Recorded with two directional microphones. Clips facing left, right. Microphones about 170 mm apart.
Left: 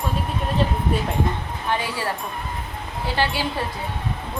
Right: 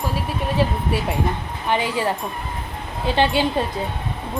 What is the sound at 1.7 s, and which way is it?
Speech, 15° right (ahead or behind).